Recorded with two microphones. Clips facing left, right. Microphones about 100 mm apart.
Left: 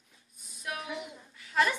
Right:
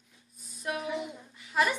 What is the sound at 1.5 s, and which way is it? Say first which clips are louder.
Speech: even; 10° right (ahead or behind).